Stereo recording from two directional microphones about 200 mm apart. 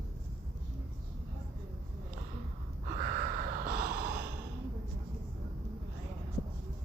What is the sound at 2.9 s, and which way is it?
Gasp, 40° right (ahead or behind).